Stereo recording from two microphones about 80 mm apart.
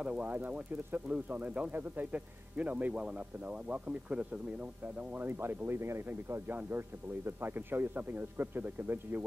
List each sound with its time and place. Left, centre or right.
0.0 s speech: centre